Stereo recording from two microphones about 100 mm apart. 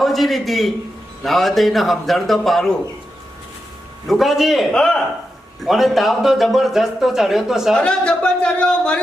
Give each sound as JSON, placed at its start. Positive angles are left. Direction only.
{"t": 0.0, "sound": "a man's voice", "side_deg": 0}
{"t": 4.0, "sound": "a man's voice", "side_deg": 0}
{"t": 7.8, "sound": "speech", "side_deg": 10}